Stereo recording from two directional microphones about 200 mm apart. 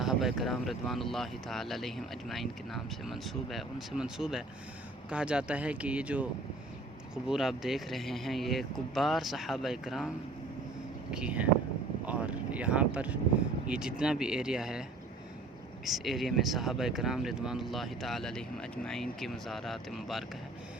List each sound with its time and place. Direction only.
0.0 s speech: centre (ahead or behind)
7.3 s speech: centre (ahead or behind)
11.1 s speech: 5° right (ahead or behind)
15.9 s speech: centre (ahead or behind)